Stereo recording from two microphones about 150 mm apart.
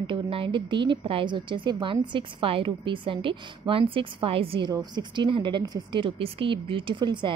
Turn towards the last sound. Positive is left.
turn(degrees=-30)  # may be behind; listen again after turning